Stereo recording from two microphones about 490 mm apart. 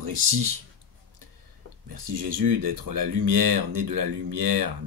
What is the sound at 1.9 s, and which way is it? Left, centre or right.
Speech, right.